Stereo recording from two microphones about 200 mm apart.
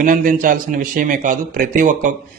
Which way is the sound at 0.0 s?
45° right (ahead or behind).